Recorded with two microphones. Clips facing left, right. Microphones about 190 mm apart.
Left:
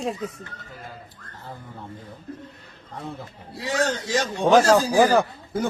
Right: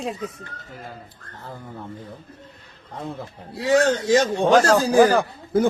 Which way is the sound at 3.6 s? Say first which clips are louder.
Right 7 dB; 55° right (ahead or behind).